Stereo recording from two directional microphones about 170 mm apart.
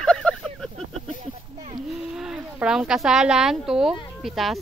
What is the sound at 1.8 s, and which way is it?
Speech, 5° right (ahead or behind).